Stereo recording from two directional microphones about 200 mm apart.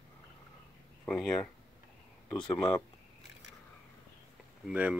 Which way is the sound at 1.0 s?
5° left (ahead or behind).